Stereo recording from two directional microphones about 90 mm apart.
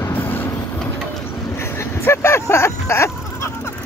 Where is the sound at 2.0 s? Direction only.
30° left (ahead or behind).